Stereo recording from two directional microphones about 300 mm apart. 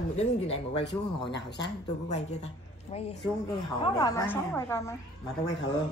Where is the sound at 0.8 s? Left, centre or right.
Left.